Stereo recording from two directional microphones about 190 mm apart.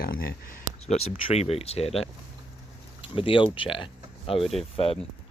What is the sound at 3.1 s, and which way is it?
Speech, 30° left (ahead or behind).